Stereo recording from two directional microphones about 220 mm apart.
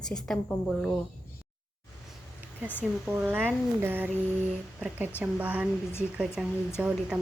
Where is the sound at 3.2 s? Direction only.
10° right (ahead or behind).